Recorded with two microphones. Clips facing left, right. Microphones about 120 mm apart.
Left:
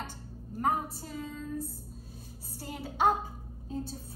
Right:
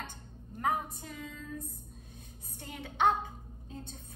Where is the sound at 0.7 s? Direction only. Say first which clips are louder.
Left 2 dB; 35° left (ahead or behind).